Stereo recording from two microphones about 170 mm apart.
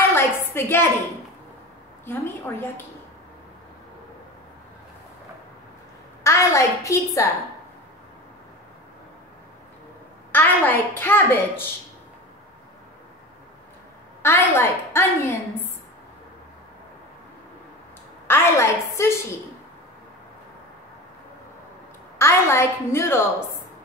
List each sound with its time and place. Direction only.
0.1 s a sound: 15° left (ahead or behind)
2.0 s a woman's voice: 10° left (ahead or behind)
6.2 s a woman's voice: 15° left (ahead or behind)
10.3 s a woman's voice: 10° left (ahead or behind)
14.2 s a woman's voice: 15° left (ahead or behind)
18.2 s a woman's voice: 15° left (ahead or behind)
22.2 s a woman's voice: 15° left (ahead or behind)